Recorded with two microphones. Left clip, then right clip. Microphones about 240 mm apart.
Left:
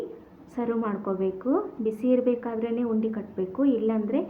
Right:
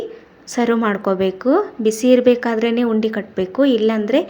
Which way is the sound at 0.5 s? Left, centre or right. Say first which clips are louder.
Right 11 dB; right.